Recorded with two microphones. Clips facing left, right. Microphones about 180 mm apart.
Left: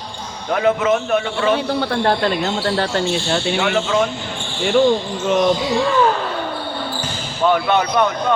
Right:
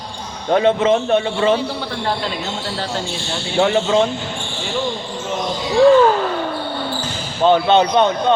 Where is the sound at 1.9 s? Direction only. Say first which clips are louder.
Left 7 dB; 60° left (ahead or behind).